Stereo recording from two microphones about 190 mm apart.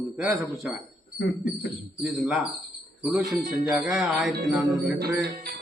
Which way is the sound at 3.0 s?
Centre (ahead or behind).